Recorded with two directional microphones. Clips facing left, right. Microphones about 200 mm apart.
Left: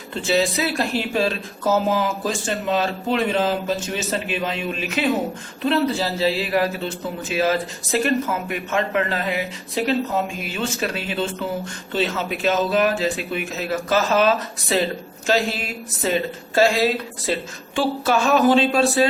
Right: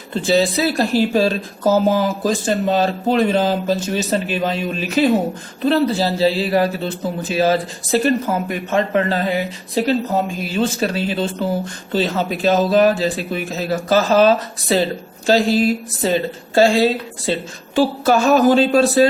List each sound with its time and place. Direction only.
0.1 s speech: 35° right (ahead or behind)
17.7 s speech: 40° right (ahead or behind)